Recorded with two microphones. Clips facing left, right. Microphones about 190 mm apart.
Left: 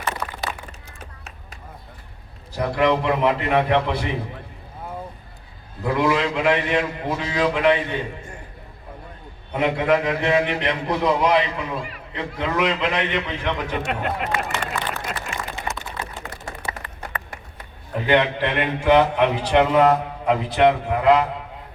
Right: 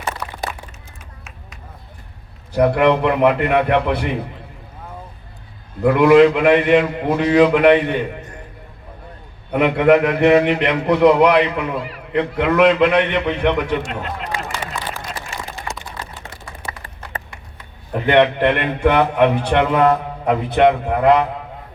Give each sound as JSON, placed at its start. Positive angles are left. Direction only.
{"t": 2.5, "sound": "a man's voice", "side_deg": -60}
{"t": 5.8, "sound": "a man's voice", "side_deg": -60}
{"t": 9.5, "sound": "a man's voice", "side_deg": -65}
{"t": 14.6, "sound": "a sound", "side_deg": 0}
{"t": 16.8, "sound": "a sound", "side_deg": -25}
{"t": 18.0, "sound": "a man's voice", "side_deg": -60}